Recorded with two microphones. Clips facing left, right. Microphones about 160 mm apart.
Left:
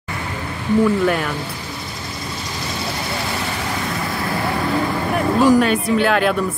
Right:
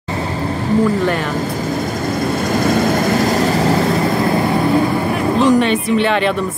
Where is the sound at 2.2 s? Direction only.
55° right (ahead or behind).